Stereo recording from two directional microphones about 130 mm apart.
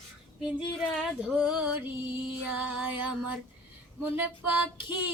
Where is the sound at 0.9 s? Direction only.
5° right (ahead or behind).